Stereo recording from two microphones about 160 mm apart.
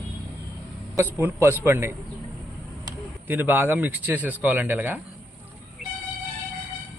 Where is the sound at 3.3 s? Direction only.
10° right (ahead or behind).